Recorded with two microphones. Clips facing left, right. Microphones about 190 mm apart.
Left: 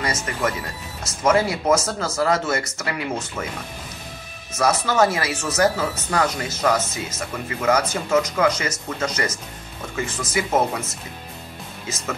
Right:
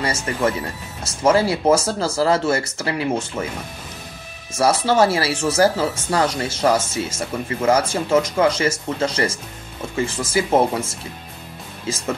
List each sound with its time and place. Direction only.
0.0 s speech: 30° right (ahead or behind)
4.5 s speech: 30° right (ahead or behind)